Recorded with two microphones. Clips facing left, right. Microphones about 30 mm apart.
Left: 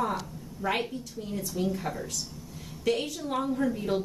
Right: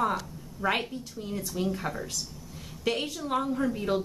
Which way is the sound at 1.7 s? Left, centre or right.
Centre.